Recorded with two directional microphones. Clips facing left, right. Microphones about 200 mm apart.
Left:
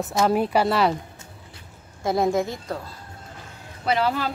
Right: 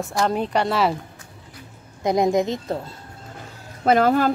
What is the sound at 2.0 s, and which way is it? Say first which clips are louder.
Speech: right 3 dB; 20° right (ahead or behind).